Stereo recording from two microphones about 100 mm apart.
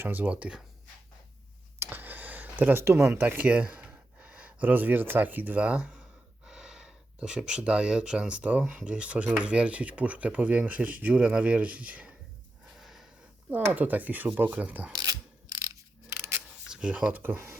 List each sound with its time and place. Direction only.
0.0 s speech: 20° right (ahead or behind)
1.8 s speech: 20° right (ahead or behind)
12.7 s wheeze: 5° right (ahead or behind)
13.5 s speech: 15° right (ahead or behind)
14.9 s mechanisms: 45° right (ahead or behind); by 16.4 s 25° right (ahead or behind)
16.6 s speech: 10° right (ahead or behind)